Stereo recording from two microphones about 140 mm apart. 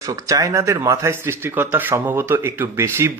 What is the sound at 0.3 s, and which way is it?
Speech, 25° right (ahead or behind).